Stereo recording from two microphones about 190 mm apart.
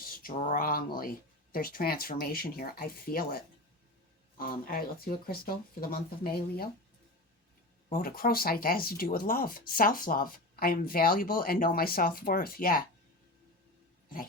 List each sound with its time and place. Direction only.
0.0 s speech: 50° left (ahead or behind)
7.9 s speech: 50° left (ahead or behind)